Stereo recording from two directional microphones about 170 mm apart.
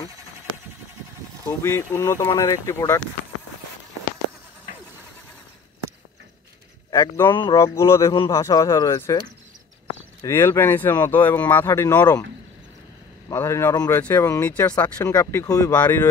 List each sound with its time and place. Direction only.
1.6 s speech: 15° left (ahead or behind)
6.9 s speech: 15° left (ahead or behind)
10.2 s speech: 15° left (ahead or behind)
13.3 s speech: 15° left (ahead or behind)